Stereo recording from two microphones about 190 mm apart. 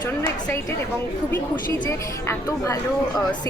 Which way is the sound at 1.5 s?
20° left (ahead or behind).